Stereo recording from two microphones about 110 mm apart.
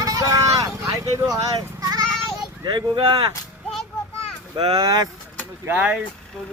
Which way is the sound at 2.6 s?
45° right (ahead or behind).